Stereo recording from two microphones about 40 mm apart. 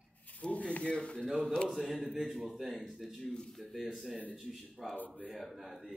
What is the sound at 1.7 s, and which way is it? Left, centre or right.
A man's voice, centre.